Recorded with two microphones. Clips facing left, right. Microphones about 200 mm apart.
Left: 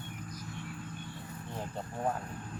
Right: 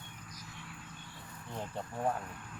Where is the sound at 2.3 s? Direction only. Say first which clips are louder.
Left 5 dB; 35° left (ahead or behind).